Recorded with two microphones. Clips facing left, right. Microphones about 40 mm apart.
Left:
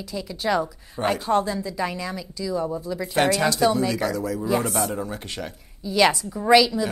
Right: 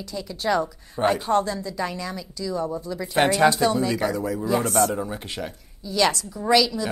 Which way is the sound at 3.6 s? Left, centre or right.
Centre.